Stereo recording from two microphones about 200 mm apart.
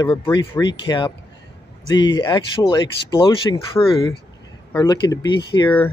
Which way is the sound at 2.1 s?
20° left (ahead or behind).